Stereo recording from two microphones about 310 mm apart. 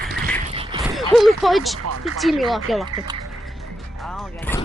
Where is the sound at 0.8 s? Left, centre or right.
Centre.